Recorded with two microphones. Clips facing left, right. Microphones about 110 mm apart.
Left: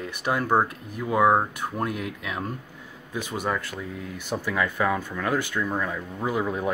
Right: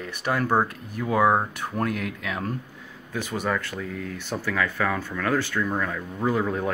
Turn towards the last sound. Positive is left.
turn(degrees=10)  # may be behind; listen again after turning